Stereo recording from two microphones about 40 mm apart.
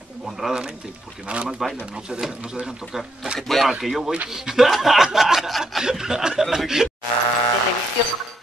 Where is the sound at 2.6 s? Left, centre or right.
Centre.